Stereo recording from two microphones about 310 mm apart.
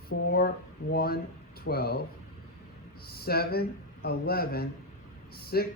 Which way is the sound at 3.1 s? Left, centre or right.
Left.